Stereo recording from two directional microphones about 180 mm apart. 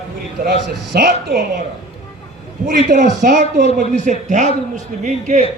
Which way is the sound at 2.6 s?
45° right (ahead or behind).